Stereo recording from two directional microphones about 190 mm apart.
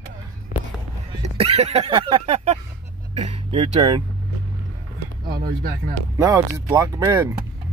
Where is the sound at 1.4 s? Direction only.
35° right (ahead or behind).